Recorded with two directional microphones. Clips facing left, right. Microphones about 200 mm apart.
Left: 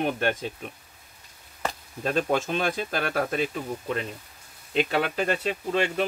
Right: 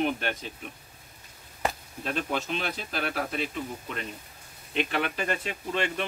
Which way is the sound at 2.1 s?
45° left (ahead or behind).